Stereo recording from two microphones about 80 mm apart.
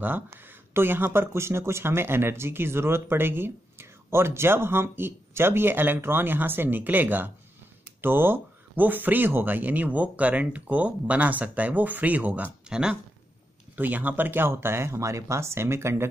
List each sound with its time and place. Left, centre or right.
0.7 s speech: right
12.6 s speech: centre
13.7 s speech: right